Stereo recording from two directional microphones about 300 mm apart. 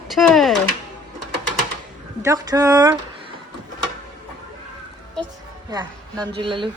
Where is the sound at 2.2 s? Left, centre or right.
Centre.